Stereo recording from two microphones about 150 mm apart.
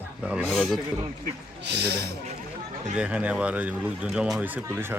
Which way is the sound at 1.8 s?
90° right.